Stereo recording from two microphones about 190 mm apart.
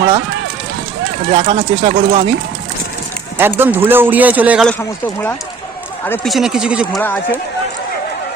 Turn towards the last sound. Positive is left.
turn(degrees=10)  # may be behind; listen again after turning